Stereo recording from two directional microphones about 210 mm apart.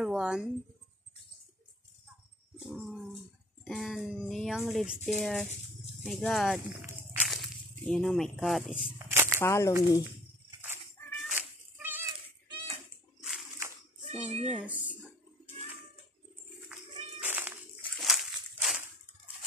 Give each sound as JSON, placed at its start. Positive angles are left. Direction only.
{"t": 0.0, "sound": "speech", "side_deg": -5}
{"t": 2.6, "sound": "speech", "side_deg": 0}
{"t": 9.1, "sound": "a sound", "side_deg": -10}
{"t": 9.4, "sound": "speech", "side_deg": 15}
{"t": 11.0, "sound": "cat", "side_deg": 10}
{"t": 11.3, "sound": "cat", "side_deg": -10}
{"t": 14.0, "sound": "a child's voice", "side_deg": -30}
{"t": 14.5, "sound": "a sound", "side_deg": -5}
{"t": 16.6, "sound": "cat", "side_deg": -5}